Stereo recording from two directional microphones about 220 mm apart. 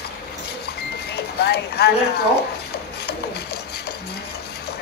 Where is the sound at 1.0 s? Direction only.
45° left (ahead or behind).